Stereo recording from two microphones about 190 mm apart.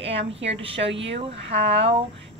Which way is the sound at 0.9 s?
70° right (ahead or behind).